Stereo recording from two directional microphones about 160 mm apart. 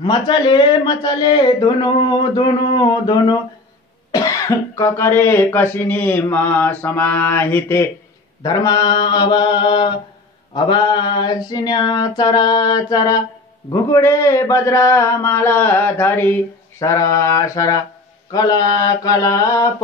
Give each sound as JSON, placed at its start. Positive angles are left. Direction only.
{"t": 0.0, "sound": "speech", "side_deg": 25}